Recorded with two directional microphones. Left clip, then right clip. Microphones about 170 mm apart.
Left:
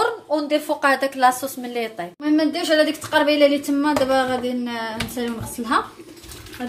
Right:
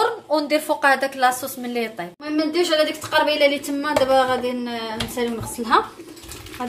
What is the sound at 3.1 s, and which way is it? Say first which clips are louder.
A woman's voice: left 1 dB; 30° right (ahead or behind).